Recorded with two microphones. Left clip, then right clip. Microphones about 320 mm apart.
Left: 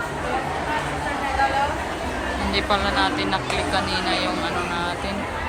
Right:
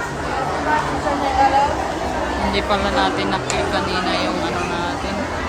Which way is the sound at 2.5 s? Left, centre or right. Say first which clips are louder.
Right 1 dB; centre.